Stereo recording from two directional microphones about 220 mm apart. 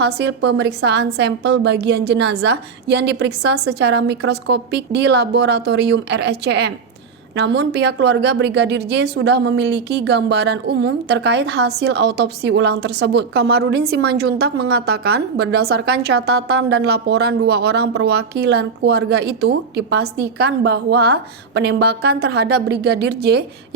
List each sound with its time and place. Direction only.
0.0 s a woman's voice: 50° right (ahead or behind)